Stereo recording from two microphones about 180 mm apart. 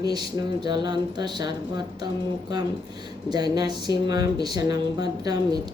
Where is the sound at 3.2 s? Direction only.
20° right (ahead or behind).